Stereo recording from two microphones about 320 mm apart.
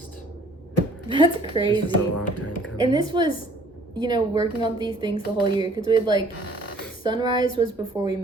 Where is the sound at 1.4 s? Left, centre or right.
Centre.